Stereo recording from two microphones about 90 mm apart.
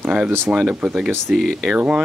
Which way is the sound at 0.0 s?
15° right (ahead or behind).